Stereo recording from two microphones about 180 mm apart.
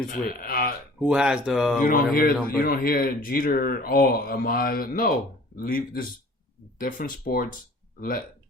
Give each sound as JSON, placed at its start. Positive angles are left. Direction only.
{"t": 0.1, "sound": "speech", "side_deg": 55}
{"t": 0.9, "sound": "speech", "side_deg": -5}
{"t": 1.8, "sound": "speech", "side_deg": 55}